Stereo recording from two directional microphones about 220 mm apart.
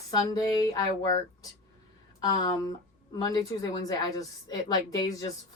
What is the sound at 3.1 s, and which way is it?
A woman's voice, 15° left (ahead or behind).